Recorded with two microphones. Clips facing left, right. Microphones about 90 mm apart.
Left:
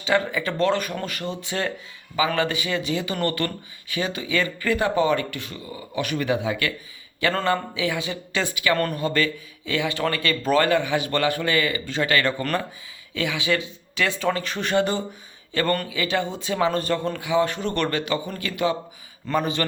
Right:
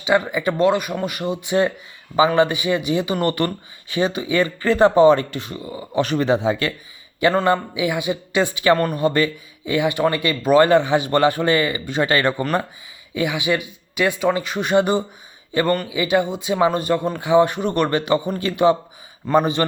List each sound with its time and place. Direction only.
0.0 s speech: 15° right (ahead or behind)
17.2 s speech: 25° right (ahead or behind)